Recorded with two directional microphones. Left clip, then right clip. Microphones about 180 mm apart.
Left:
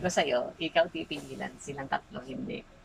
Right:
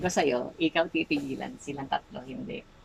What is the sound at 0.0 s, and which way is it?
Speech, 20° right (ahead or behind).